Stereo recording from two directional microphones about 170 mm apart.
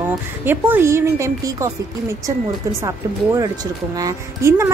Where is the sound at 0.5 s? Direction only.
10° right (ahead or behind).